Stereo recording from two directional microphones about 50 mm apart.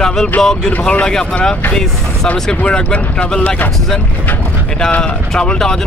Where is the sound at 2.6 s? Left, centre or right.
Left.